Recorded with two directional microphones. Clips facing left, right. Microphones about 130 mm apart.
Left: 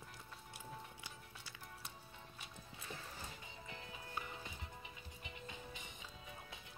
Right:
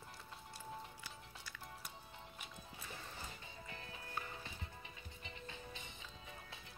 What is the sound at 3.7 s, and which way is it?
Music, 15° left (ahead or behind).